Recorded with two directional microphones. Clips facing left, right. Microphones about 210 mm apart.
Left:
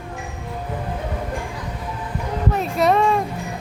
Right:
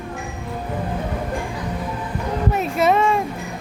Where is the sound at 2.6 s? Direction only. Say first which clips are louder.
Even; centre (ahead or behind).